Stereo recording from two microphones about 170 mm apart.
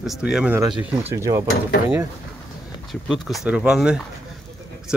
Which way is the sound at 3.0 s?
Centre (ahead or behind).